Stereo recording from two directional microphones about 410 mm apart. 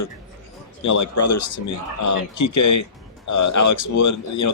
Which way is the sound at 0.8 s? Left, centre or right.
Left.